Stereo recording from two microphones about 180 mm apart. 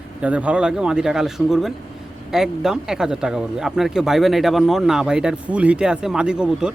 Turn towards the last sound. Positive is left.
turn(degrees=-5)  # may be behind; listen again after turning